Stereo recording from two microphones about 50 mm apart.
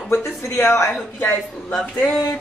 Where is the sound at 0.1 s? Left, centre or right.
Left.